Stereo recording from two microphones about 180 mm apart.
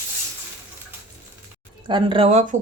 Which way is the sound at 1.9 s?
25° right (ahead or behind).